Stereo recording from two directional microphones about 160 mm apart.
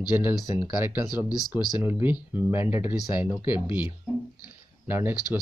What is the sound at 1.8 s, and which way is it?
Speech, 10° right (ahead or behind).